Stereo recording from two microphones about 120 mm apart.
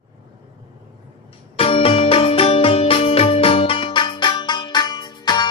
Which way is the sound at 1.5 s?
55° left (ahead or behind).